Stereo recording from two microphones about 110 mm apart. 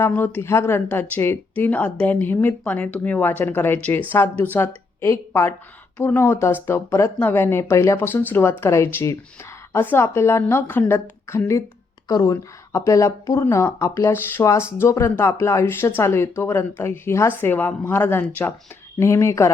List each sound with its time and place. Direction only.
0.1 s a woman's voice: 20° left (ahead or behind)
18.9 s speech: 25° left (ahead or behind)